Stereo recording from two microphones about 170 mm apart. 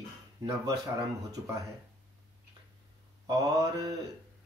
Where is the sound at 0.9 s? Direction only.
20° right (ahead or behind).